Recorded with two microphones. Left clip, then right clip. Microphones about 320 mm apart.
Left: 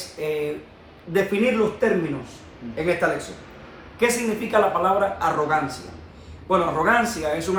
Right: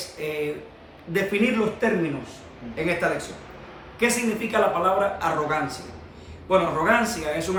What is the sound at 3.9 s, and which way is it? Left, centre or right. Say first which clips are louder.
A man's voice: left 2 dB; centre.